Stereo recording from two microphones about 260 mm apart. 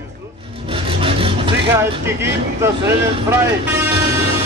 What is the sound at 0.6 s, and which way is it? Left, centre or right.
Vehicle, right.